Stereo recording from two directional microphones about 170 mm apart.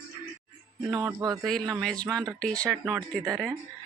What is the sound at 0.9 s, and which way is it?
Speech, 20° right (ahead or behind).